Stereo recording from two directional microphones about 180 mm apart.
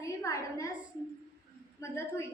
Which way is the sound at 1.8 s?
15° left (ahead or behind).